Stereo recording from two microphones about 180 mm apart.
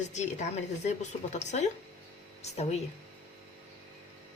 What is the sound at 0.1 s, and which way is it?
Speech, 40° left (ahead or behind).